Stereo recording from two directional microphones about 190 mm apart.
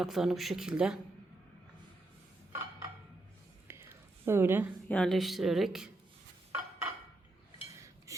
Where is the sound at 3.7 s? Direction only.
15° right (ahead or behind).